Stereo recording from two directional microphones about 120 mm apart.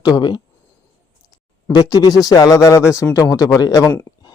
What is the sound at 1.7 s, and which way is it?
Speech, 30° left (ahead or behind).